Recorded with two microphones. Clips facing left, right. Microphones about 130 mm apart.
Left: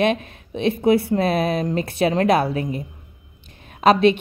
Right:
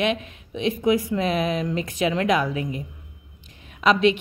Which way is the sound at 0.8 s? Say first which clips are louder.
Left 4 dB; 35° left (ahead or behind).